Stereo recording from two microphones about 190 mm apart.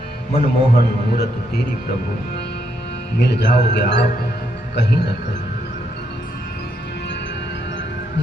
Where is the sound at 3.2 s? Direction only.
65° left (ahead or behind).